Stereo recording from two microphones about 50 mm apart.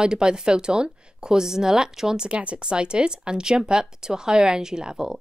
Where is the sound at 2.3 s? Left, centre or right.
Right.